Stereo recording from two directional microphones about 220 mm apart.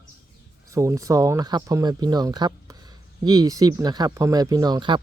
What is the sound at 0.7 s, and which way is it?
Speech, 15° right (ahead or behind).